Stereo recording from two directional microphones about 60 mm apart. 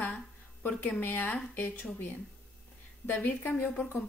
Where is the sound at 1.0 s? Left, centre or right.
Left.